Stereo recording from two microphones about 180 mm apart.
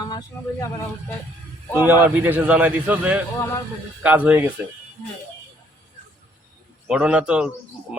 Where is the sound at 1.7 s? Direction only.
10° right (ahead or behind).